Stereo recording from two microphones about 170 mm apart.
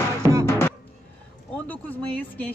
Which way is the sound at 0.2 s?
20° right (ahead or behind).